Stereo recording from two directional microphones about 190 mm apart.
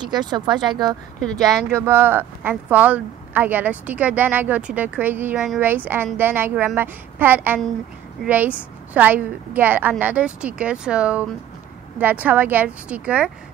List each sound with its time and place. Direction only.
0.0 s speech: 20° right (ahead or behind); by 13.3 s 5° right (ahead or behind)